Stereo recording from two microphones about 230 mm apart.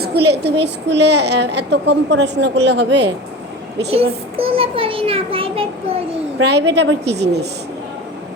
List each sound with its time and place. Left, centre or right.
0.0 s a woman's voice: right
3.8 s a child's voice: right
6.4 s a woman's voice: right